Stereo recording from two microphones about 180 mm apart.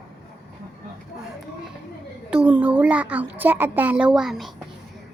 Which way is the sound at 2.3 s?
5° right (ahead or behind).